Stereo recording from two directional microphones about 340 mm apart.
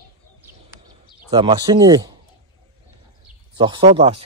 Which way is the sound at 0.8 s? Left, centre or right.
Centre.